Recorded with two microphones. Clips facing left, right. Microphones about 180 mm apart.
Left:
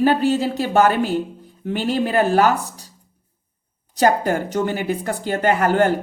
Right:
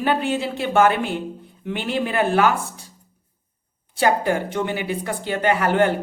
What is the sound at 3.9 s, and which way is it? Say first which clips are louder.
Speech: left 2 dB; 45° left (ahead or behind).